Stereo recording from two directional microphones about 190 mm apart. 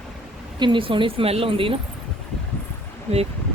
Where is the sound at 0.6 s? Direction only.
25° right (ahead or behind).